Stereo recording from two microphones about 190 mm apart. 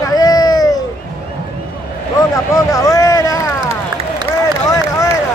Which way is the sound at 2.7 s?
15° left (ahead or behind).